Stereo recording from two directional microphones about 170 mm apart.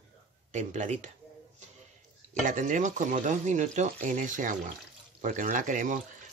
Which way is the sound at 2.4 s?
50° right (ahead or behind).